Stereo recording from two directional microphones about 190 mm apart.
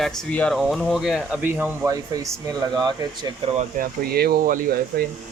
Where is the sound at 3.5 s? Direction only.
50° right (ahead or behind).